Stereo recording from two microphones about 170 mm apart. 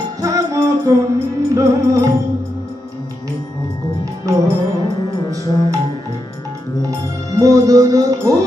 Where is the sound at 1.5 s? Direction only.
20° right (ahead or behind).